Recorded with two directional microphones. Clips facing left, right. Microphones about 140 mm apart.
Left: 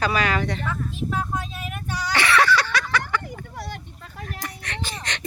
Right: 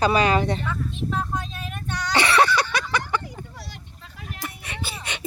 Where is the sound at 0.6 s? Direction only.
Centre (ahead or behind).